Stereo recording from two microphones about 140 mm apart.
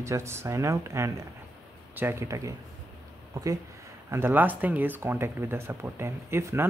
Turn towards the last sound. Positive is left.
turn(degrees=-20)  # may be behind; listen again after turning